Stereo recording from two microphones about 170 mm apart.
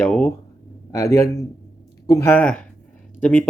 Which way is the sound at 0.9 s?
20° left (ahead or behind).